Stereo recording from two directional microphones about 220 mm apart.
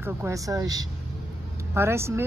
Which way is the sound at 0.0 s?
15° right (ahead or behind).